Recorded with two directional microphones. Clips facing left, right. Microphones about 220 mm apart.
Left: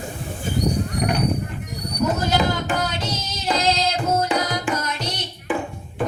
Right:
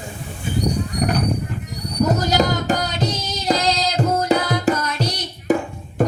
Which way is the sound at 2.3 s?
40° right (ahead or behind).